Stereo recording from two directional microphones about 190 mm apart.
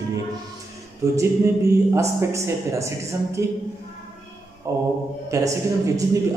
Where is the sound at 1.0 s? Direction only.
15° right (ahead or behind).